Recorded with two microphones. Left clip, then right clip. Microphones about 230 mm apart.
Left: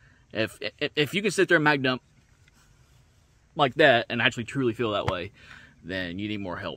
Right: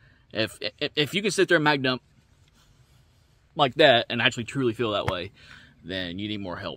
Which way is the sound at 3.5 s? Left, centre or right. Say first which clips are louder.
Right 1 dB; centre.